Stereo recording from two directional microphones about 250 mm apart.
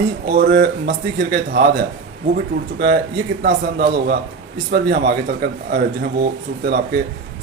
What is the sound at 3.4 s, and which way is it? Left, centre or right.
A man's voice, right.